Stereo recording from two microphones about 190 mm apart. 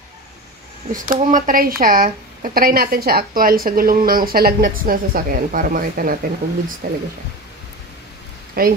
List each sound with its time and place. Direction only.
1.0 s speech: 45° right (ahead or behind)
8.6 s speech: 50° right (ahead or behind)